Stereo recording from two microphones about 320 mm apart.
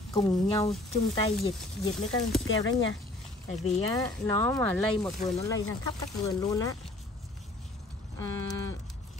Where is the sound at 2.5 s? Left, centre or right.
Left.